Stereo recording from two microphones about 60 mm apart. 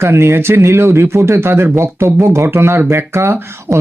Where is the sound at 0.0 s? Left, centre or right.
Right.